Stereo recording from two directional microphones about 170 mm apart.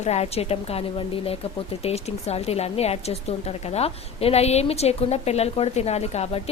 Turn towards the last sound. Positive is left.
turn(degrees=40)  # may be behind; listen again after turning